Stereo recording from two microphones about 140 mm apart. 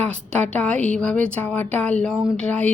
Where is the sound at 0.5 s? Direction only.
10° left (ahead or behind).